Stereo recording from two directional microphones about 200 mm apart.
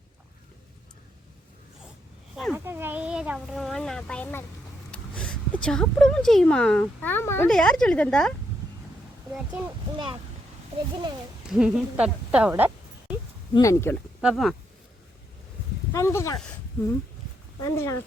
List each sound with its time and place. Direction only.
2.3 s speech: centre (ahead or behind)
2.6 s a child's voice: 10° right (ahead or behind)
9.3 s speech: 5° right (ahead or behind)
11.5 s speech: 5° right (ahead or behind)
13.5 s speech: 15° left (ahead or behind)
14.2 s speech: centre (ahead or behind)
15.9 s speech: 15° left (ahead or behind)
17.6 s speech: 15° left (ahead or behind)